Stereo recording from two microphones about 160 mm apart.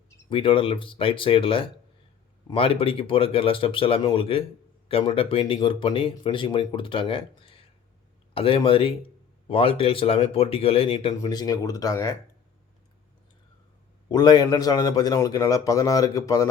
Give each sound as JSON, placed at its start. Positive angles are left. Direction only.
{"t": 0.3, "sound": "speech", "side_deg": 30}
{"t": 11.1, "sound": "a man's voice", "side_deg": 25}
{"t": 14.1, "sound": "a man's voice", "side_deg": 25}